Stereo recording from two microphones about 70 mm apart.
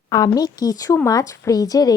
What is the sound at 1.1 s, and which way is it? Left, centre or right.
Speech, left.